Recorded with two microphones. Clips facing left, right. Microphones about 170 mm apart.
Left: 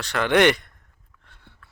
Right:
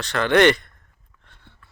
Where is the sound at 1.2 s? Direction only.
10° left (ahead or behind).